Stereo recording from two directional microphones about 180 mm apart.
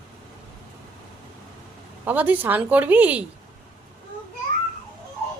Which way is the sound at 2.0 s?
10° right (ahead or behind).